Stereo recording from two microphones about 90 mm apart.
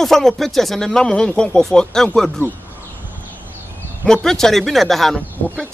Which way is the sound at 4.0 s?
5° left (ahead or behind).